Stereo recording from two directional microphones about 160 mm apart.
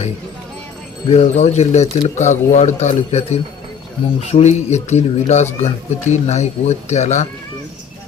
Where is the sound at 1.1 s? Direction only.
45° left (ahead or behind).